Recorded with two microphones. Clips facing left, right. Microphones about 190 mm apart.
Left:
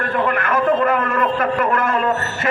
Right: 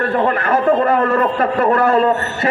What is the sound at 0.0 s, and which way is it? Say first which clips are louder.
A man's voice: right 3 dB; 35° right (ahead or behind).